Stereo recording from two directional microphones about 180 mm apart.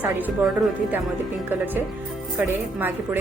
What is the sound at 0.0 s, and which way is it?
A woman's voice, 10° right (ahead or behind).